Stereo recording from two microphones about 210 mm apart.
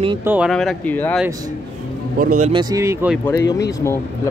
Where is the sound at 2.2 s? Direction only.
40° right (ahead or behind).